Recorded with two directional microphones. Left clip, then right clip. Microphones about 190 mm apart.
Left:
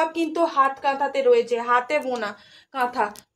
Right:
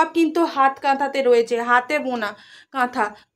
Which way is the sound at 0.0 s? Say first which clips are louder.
Right 4 dB; 45° right (ahead or behind).